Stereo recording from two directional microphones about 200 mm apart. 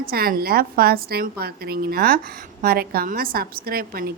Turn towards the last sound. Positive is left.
turn(degrees=-50)  # may be behind; listen again after turning